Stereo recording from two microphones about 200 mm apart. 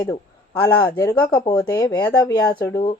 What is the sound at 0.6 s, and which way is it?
Speech, 15° left (ahead or behind).